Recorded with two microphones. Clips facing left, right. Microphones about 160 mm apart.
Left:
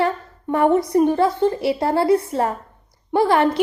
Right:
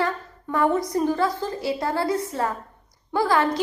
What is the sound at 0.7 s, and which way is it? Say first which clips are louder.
Speech: left 7 dB; 60° left (ahead or behind).